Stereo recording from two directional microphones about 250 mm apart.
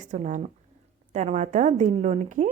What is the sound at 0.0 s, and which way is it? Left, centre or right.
A woman's voice, right.